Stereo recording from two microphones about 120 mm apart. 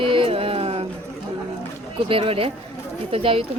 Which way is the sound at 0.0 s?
45° right (ahead or behind).